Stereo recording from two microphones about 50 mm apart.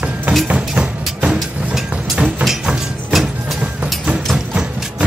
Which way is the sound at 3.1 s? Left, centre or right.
Centre.